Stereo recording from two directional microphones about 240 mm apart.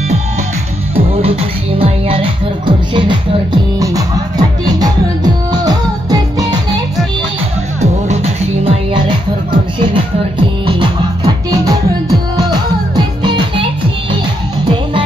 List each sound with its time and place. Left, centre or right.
0.9 s music: right
8.6 s music: centre
10.7 s music: centre